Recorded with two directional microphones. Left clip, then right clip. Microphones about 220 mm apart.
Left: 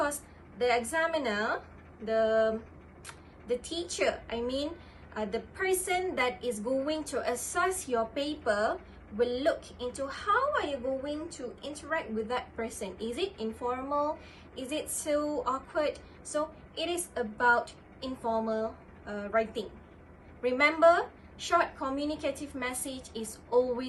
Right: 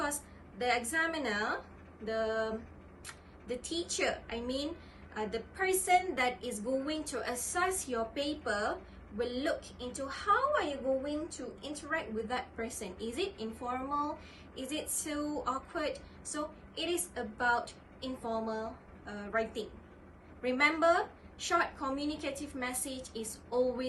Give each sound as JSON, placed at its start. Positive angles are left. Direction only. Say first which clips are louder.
{"t": 0.6, "sound": "a woman's voice", "louder": "left 4 dB", "side_deg": 10}